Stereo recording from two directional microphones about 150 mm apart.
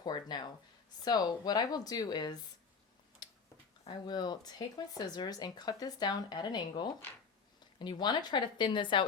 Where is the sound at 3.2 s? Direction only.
30° left (ahead or behind).